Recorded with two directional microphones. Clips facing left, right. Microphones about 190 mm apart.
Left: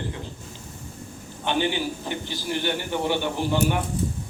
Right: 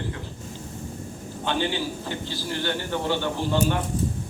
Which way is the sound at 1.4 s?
15° left (ahead or behind).